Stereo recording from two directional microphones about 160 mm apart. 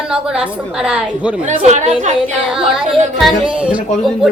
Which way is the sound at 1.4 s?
50° right (ahead or behind).